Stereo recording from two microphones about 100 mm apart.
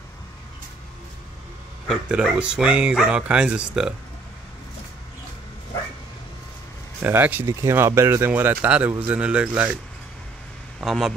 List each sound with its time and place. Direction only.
2.2 s speech: 10° right (ahead or behind)
7.0 s speech: 20° right (ahead or behind)
10.8 s speech: centre (ahead or behind)